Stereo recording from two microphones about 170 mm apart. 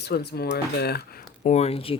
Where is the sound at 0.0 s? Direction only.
70° left (ahead or behind).